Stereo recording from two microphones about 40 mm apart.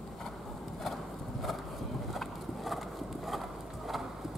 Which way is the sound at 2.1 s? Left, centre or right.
Centre.